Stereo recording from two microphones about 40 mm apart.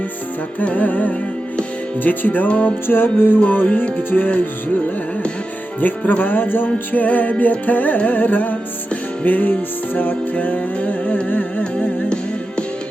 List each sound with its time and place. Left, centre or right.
0.6 s music: left
2.5 s music: left
2.8 s music: left
3.4 s music: left
4.1 s music: left
5.8 s music: left
6.9 s music: left
11.6 s music: left